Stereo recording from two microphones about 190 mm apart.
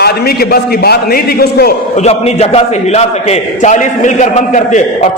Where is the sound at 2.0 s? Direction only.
35° left (ahead or behind).